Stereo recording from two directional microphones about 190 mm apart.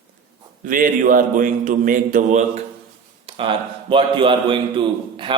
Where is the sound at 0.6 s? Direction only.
45° right (ahead or behind).